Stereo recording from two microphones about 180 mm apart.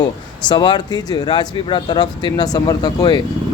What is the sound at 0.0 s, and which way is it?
Speech, 25° left (ahead or behind).